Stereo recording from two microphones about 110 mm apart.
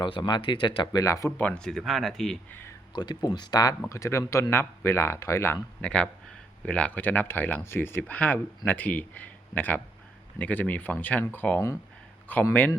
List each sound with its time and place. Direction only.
0.0 s speech: 45° left (ahead or behind)
1.0 s speech: 30° left (ahead or behind)
1.4 s speech: 10° left (ahead or behind)
2.5 s speech: 20° left (ahead or behind)
2.9 s speech: 40° left (ahead or behind); by 5.5 s 25° left (ahead or behind)
5.8 s speech: 10° left (ahead or behind)